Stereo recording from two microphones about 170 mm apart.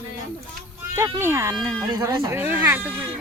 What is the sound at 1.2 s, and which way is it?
Speech, 15° right (ahead or behind).